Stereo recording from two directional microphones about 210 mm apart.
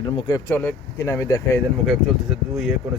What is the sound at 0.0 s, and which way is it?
Speech, 20° left (ahead or behind).